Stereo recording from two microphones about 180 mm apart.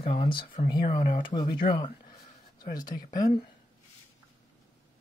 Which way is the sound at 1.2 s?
25° left (ahead or behind).